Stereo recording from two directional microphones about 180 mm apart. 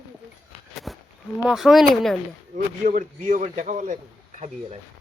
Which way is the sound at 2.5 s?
45° right (ahead or behind).